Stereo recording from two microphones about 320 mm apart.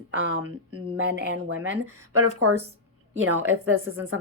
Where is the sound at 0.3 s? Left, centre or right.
Right.